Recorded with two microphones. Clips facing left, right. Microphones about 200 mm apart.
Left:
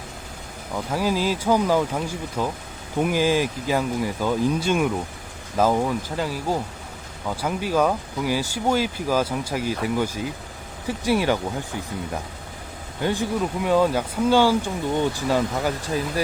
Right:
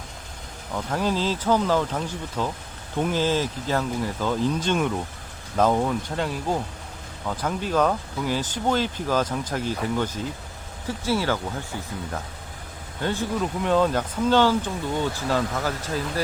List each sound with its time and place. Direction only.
0.7 s speech: 10° left (ahead or behind)
13.0 s speech: 10° left (ahead or behind)